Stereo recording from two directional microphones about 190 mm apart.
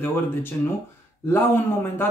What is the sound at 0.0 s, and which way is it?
A man's voice, 10° left (ahead or behind).